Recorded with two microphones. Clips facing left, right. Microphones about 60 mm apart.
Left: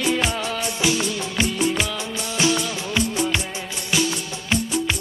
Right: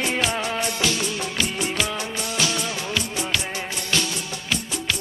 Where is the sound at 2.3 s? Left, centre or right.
Left.